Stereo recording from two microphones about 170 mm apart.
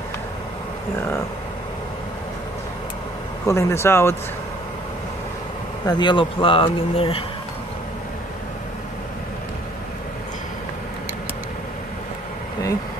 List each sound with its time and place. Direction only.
3.4 s speech: 15° left (ahead or behind)
5.9 s speech: 25° left (ahead or behind)